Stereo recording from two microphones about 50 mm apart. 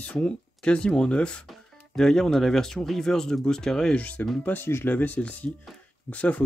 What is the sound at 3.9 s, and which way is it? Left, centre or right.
Speech, left.